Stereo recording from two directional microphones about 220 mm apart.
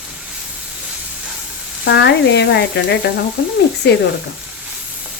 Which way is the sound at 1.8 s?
50° left (ahead or behind).